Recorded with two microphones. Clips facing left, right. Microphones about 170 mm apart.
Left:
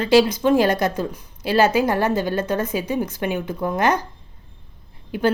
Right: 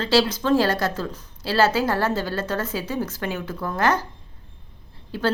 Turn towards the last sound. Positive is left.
turn(degrees=15)  # may be behind; listen again after turning